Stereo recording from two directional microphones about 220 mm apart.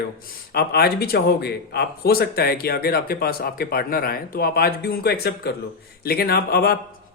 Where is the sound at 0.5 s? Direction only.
45° left (ahead or behind).